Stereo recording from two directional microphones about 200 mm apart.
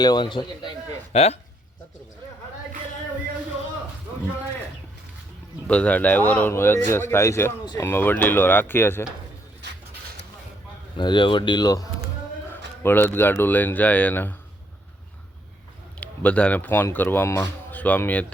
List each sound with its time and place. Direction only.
0.0 s a man's voice: 20° left (ahead or behind)
5.6 s speech: 5° left (ahead or behind)
10.9 s a man's voice: 25° left (ahead or behind)
16.0 s speech: 5° left (ahead or behind)